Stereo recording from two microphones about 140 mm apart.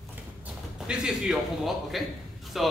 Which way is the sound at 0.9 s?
5° right (ahead or behind).